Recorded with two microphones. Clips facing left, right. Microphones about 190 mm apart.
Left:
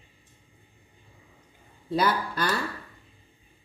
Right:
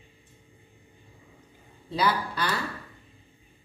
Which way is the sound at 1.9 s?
50° left (ahead or behind).